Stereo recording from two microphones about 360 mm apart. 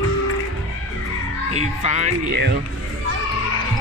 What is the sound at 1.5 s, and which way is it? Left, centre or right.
Music, centre.